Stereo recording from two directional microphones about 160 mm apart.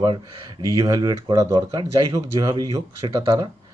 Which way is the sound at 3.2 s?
35° right (ahead or behind).